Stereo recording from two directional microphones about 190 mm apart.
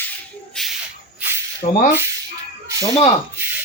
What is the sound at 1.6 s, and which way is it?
Speech, 35° left (ahead or behind).